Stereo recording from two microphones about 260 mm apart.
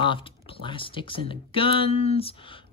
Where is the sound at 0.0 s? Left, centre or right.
Centre.